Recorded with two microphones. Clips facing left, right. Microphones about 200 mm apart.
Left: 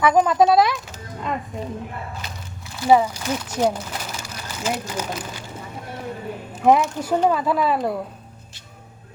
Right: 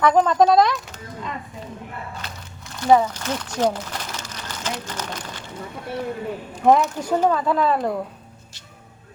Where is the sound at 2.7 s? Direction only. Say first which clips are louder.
Even; 5° left (ahead or behind).